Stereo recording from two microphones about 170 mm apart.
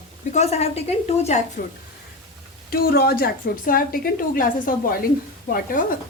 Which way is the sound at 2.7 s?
65° left (ahead or behind).